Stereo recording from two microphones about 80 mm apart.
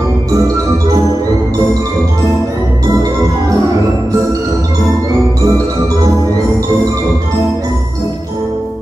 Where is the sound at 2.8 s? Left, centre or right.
Right.